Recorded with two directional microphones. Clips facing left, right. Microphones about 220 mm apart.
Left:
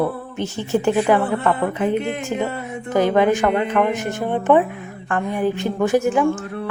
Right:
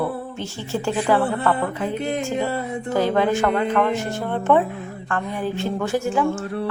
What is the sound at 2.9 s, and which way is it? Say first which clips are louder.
A woman's voice: left 3 dB; 15° left (ahead or behind).